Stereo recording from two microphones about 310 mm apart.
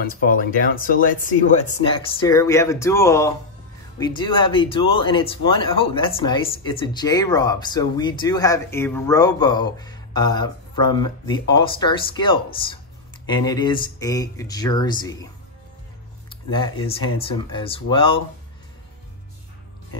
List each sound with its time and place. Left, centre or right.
0.0 s speech: left; by 15.1 s centre
16.3 s speech: centre